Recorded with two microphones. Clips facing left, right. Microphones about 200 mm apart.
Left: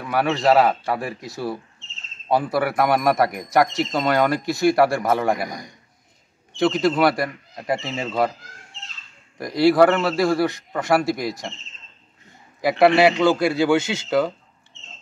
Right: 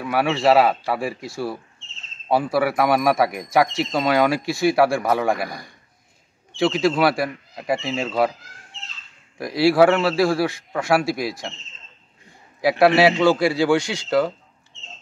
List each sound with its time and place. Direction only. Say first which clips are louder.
0.0 s a man's voice: right 1 dB; 5° right (ahead or behind)
2.2 s speech: right 1 dB; 5° right (ahead or behind)
5.5 s a man's voice: left 2 dB; 20° left (ahead or behind)
6.5 s speech: even; 5° right (ahead or behind)
9.4 s speech: even; 5° right (ahead or behind)
12.6 s speech: even; centre (ahead or behind)
13.7 s speech: left 1 dB; 25° left (ahead or behind)